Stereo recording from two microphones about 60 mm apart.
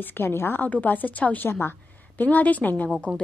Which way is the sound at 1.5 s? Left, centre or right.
Left.